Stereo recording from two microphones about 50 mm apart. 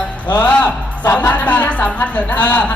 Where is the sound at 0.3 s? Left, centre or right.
Left.